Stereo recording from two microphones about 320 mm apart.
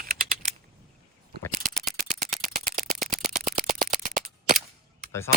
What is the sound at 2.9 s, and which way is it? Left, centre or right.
Engine, centre.